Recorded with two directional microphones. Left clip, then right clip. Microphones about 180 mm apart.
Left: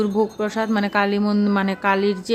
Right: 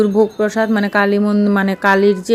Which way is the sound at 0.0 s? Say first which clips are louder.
Right 7 dB; 20° right (ahead or behind).